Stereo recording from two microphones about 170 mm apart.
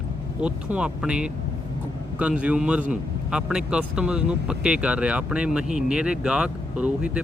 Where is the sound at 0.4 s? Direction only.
5° right (ahead or behind).